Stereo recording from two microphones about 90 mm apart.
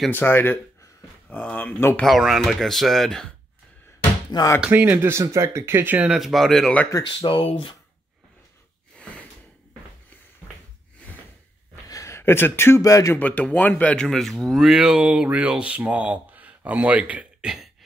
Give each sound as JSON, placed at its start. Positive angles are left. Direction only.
{"t": 0.1, "sound": "speech", "side_deg": 25}
{"t": 2.0, "sound": "speech", "side_deg": 0}
{"t": 4.3, "sound": "speech", "side_deg": 55}
{"t": 4.6, "sound": "speech", "side_deg": -20}
{"t": 6.0, "sound": "speech", "side_deg": 0}
{"t": 7.0, "sound": "speech", "side_deg": 70}
{"t": 11.9, "sound": "speech", "side_deg": 35}
{"t": 13.2, "sound": "speech", "side_deg": 15}
{"t": 14.0, "sound": "speech", "side_deg": 5}